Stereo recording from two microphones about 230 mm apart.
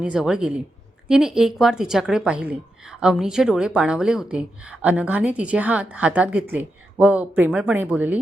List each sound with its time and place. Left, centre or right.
0.0 s a woman's voice: centre